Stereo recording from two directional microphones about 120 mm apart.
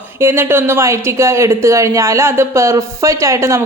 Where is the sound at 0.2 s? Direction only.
20° right (ahead or behind).